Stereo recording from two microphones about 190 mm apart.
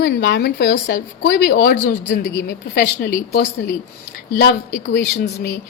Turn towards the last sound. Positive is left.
turn(degrees=60)  # may be behind; listen again after turning